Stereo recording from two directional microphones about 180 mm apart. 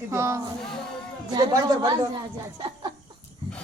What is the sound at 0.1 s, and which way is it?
Speech, 15° right (ahead or behind).